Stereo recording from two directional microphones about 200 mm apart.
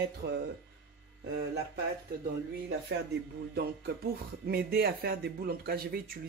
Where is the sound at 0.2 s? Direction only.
55° right (ahead or behind).